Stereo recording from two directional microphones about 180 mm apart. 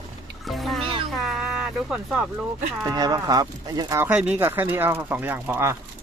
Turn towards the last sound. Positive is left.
turn(degrees=-10)  # may be behind; listen again after turning